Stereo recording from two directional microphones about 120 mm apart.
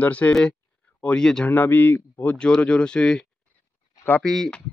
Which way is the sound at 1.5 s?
15° left (ahead or behind).